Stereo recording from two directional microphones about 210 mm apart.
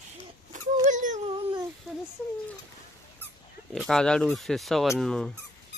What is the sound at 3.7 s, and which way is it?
Speech, centre (ahead or behind).